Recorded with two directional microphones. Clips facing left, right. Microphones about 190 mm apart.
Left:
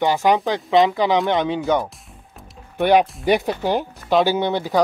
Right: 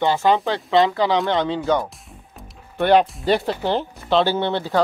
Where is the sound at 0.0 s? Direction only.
15° left (ahead or behind).